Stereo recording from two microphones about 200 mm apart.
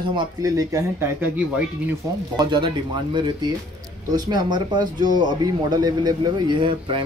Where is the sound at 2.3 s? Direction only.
25° right (ahead or behind).